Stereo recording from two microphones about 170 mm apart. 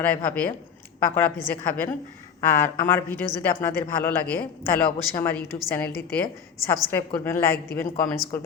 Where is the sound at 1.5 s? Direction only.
10° left (ahead or behind).